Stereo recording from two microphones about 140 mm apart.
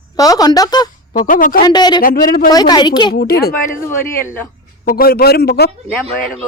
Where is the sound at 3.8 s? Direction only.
20° left (ahead or behind).